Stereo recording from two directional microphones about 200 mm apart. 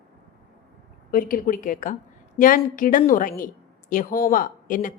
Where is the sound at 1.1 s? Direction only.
45° left (ahead or behind).